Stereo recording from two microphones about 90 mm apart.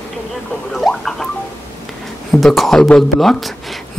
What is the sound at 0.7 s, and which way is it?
Speech, 5° left (ahead or behind).